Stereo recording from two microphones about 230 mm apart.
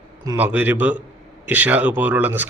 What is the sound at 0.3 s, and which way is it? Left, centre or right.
Speech, centre.